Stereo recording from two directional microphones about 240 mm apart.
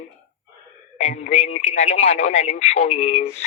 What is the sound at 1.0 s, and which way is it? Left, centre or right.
Speech, left.